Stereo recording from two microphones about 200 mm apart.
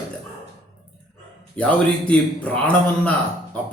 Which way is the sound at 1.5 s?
5° left (ahead or behind).